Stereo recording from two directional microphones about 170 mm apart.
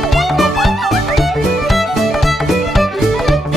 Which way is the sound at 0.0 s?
Centre (ahead or behind).